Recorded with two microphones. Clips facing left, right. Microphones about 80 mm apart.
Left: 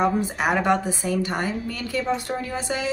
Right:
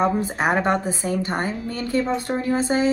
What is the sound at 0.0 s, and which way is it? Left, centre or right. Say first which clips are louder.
A woman's voice: right 1 dB; right.